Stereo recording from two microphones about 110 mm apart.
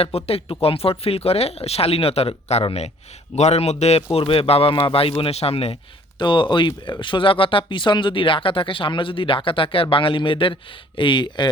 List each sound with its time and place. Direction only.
0.0 s speech: 65° left (ahead or behind)
3.3 s a man's voice: 85° left; by 5.7 s 65° left (ahead or behind)
6.1 s speech: 45° left (ahead or behind)